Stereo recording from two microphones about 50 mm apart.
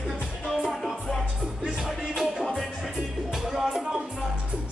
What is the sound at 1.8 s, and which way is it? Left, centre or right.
Music, centre.